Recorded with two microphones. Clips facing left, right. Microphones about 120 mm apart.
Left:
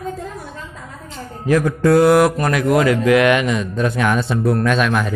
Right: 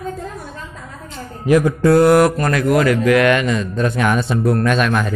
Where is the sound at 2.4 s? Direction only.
15° left (ahead or behind).